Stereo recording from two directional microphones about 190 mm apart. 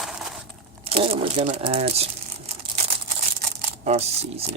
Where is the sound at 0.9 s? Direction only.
30° right (ahead or behind).